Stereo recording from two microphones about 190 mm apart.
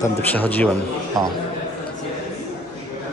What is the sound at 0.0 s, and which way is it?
Speech, 10° left (ahead or behind).